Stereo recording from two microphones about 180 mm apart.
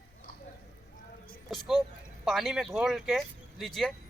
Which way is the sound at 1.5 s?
Centre (ahead or behind).